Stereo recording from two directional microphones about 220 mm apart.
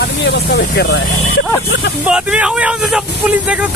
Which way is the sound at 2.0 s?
5° right (ahead or behind).